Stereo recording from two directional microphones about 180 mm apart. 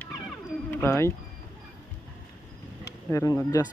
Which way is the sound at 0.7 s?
15° left (ahead or behind).